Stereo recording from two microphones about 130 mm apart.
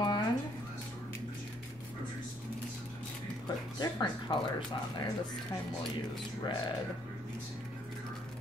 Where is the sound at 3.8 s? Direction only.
35° left (ahead or behind).